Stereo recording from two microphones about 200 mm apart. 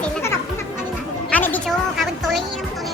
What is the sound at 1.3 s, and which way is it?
Music, 10° left (ahead or behind).